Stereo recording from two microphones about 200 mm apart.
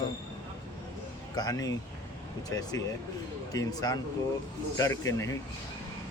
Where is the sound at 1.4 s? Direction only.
20° left (ahead or behind).